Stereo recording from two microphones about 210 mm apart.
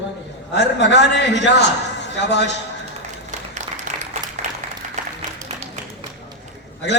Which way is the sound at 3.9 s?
40° right (ahead or behind).